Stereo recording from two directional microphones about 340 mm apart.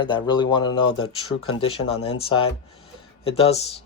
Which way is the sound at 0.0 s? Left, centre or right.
Centre.